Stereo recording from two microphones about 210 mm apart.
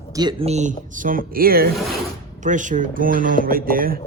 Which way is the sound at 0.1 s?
20° right (ahead or behind).